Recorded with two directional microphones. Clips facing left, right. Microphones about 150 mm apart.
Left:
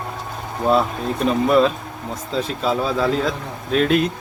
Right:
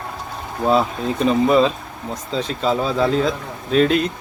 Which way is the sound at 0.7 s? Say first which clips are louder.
Even; centre (ahead or behind).